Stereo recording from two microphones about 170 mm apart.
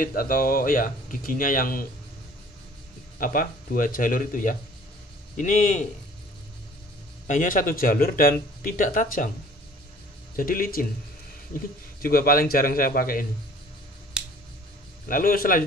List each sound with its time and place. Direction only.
0.0 s speech: 55° left (ahead or behind)
3.2 s speech: 55° left (ahead or behind)
7.2 s speech: 50° left (ahead or behind)
10.3 s speech: 55° left (ahead or behind)
12.0 s speech: 60° left (ahead or behind)
15.0 s speech: 55° left (ahead or behind)